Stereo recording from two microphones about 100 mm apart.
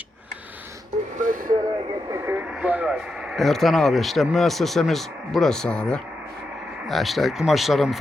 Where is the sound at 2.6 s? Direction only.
15° right (ahead or behind).